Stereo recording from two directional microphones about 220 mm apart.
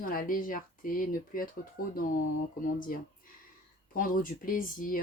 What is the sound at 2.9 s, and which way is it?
Speech, 40° left (ahead or behind).